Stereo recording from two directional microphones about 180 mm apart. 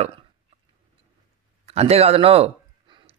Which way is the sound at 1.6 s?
35° right (ahead or behind).